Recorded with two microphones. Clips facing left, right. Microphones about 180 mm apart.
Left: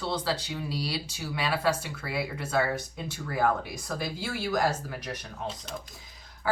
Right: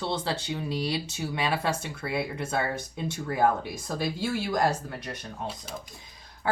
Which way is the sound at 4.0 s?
25° right (ahead or behind).